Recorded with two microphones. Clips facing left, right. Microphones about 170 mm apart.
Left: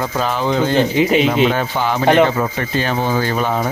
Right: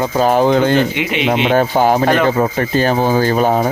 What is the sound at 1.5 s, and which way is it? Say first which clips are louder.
Speech: right 7 dB; 45° right (ahead or behind).